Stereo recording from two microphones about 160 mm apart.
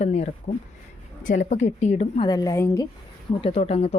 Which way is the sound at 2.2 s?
25° left (ahead or behind).